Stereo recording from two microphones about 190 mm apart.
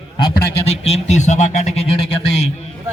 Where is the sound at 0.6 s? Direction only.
35° left (ahead or behind).